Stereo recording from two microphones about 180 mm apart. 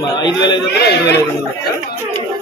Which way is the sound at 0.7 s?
65° left (ahead or behind).